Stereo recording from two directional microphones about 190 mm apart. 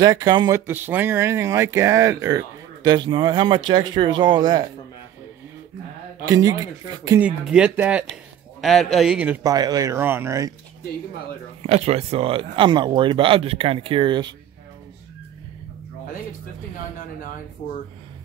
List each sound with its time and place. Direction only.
0.0 s speech: 20° right (ahead or behind)
6.2 s speech: 20° right (ahead or behind)
7.2 s a man's voice: 5° right (ahead or behind)
9.5 s speech: 20° right (ahead or behind)
11.6 s speech: 35° right (ahead or behind)